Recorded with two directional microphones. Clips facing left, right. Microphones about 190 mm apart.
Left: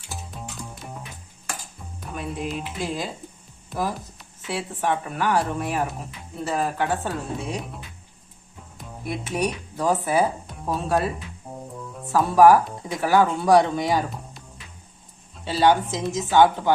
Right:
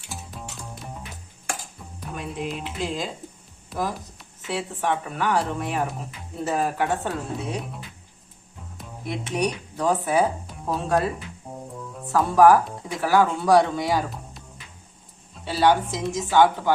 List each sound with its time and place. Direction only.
2.0 s speech: centre (ahead or behind)
6.4 s speech: 15° right (ahead or behind)
6.9 s speech: centre (ahead or behind)
9.0 s speech: 5° left (ahead or behind)
15.4 s speech: centre (ahead or behind)